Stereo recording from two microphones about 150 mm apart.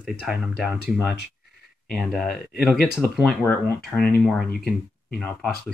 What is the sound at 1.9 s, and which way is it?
Speech, 5° left (ahead or behind).